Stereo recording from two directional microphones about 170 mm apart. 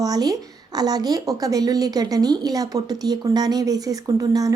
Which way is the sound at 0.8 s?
25° right (ahead or behind).